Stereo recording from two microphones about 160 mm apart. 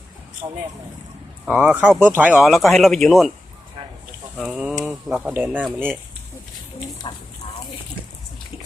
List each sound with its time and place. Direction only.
1.5 s speech: 5° right (ahead or behind)
4.4 s speech: 5° right (ahead or behind)
7.0 s speech: 30° left (ahead or behind)